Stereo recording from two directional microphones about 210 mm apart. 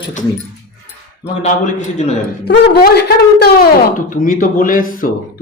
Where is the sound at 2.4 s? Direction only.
50° left (ahead or behind).